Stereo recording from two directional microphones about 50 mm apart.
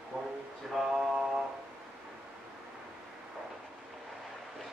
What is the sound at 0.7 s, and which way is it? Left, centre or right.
Mantra, centre.